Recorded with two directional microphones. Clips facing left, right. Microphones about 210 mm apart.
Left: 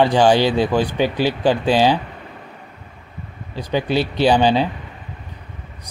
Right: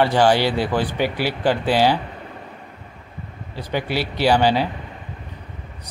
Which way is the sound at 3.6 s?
15° left (ahead or behind).